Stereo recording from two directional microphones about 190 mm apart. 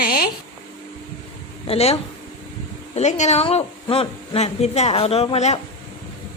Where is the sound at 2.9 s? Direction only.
40° left (ahead or behind).